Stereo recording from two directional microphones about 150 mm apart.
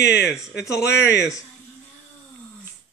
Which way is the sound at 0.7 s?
20° left (ahead or behind).